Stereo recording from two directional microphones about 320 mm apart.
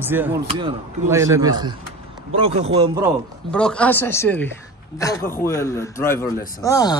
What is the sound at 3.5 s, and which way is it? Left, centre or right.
A man's voice, centre.